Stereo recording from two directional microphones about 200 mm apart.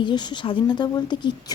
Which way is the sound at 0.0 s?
20° left (ahead or behind).